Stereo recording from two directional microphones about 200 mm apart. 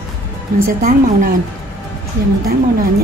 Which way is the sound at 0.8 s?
40° right (ahead or behind).